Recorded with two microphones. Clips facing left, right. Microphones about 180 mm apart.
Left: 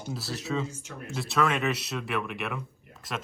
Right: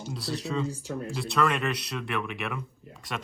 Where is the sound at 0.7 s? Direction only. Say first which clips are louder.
Right 7 dB; 35° right (ahead or behind).